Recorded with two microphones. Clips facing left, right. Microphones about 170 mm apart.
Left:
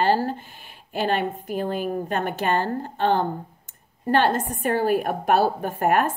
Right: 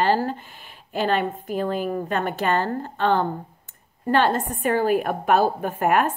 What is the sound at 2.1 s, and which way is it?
A woman's voice, 45° left (ahead or behind).